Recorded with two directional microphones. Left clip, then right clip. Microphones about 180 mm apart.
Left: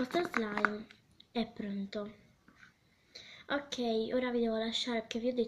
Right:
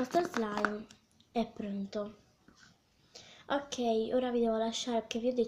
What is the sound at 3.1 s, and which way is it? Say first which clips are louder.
A woman's voice: right 2 dB; 45° right (ahead or behind).